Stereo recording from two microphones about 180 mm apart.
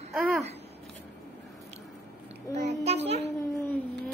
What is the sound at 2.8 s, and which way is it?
Speech, 35° right (ahead or behind).